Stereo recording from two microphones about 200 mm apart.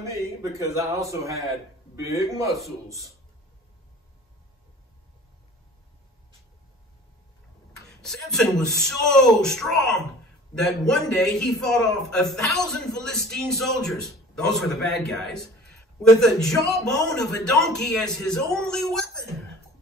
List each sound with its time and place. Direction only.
0.0 s a man's voice: 15° right (ahead or behind)
8.0 s a man's voice: 5° left (ahead or behind)